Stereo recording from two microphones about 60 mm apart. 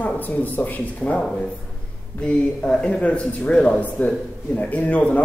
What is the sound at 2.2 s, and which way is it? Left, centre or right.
Speech, centre.